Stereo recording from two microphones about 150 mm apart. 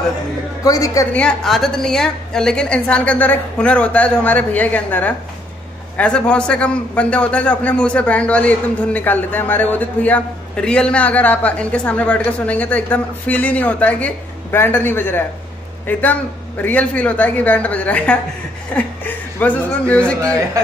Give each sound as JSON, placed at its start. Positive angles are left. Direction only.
{"t": 0.7, "sound": "a woman's voice", "side_deg": 25}
{"t": 1.1, "sound": "a man's voice", "side_deg": 5}
{"t": 20.6, "sound": "speech", "side_deg": -25}